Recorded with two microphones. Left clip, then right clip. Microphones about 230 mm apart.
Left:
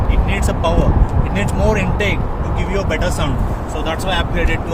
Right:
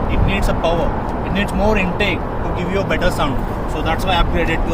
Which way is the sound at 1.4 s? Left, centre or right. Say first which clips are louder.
Right 1 dB; centre.